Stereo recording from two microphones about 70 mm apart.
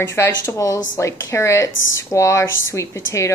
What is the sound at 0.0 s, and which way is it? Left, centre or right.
Speech, left.